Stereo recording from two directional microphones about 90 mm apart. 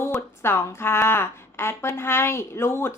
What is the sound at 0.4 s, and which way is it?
A woman's voice, 25° left (ahead or behind).